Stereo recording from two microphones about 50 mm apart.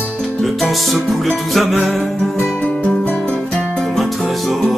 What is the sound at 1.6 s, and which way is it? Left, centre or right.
Music, centre.